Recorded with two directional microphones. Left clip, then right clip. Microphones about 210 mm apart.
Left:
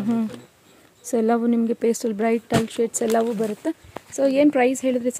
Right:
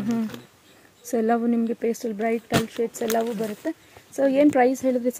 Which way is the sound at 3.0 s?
40° left (ahead or behind).